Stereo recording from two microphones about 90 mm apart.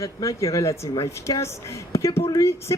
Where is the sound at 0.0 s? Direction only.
35° left (ahead or behind).